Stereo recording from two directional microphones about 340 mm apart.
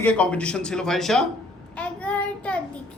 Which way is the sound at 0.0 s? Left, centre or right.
Centre.